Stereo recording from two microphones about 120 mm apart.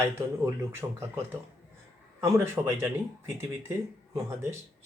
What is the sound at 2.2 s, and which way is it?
Speech, 25° right (ahead or behind).